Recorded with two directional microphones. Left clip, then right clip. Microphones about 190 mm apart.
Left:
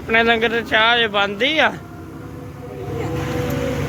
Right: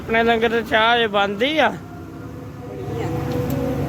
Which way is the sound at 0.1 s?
10° right (ahead or behind).